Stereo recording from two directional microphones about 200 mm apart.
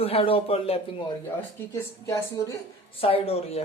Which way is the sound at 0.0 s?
30° left (ahead or behind).